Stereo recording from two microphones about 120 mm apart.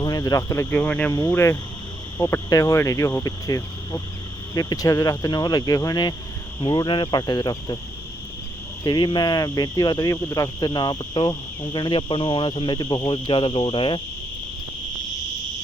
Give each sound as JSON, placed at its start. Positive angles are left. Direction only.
{"t": 0.0, "sound": "speech", "side_deg": 30}
{"t": 0.7, "sound": "speech", "side_deg": 10}
{"t": 1.3, "sound": "speech", "side_deg": 20}
{"t": 8.8, "sound": "speech", "side_deg": 35}
{"t": 13.1, "sound": "cricket", "side_deg": 40}